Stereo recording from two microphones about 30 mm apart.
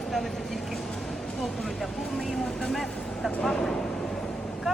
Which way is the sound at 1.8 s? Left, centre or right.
Centre.